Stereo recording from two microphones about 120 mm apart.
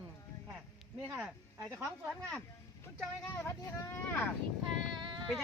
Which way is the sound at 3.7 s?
15° left (ahead or behind).